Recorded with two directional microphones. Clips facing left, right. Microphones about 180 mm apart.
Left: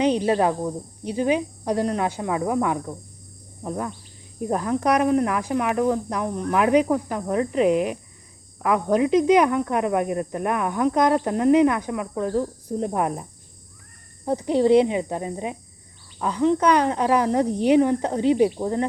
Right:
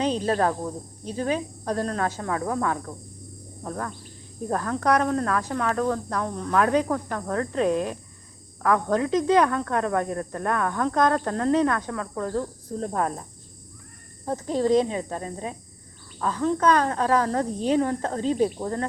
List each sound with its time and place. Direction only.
0.0 s speech: 15° left (ahead or behind)
14.3 s speech: 15° left (ahead or behind)